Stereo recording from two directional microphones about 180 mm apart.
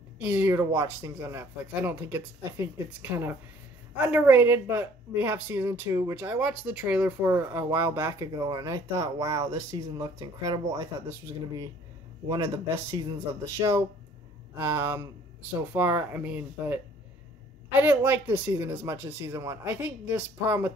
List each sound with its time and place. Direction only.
0.2 s a woman's voice: 10° right (ahead or behind)
12.3 s a woman's voice: 15° right (ahead or behind)